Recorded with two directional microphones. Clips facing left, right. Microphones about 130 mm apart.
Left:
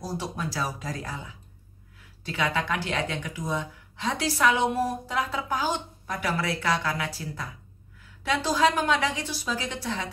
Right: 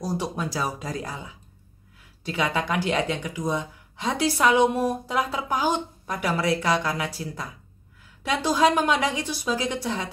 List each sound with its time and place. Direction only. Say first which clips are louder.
0.0 s speech: right 4 dB; 15° right (ahead or behind)
2.2 s speech: right 2 dB; 15° right (ahead or behind)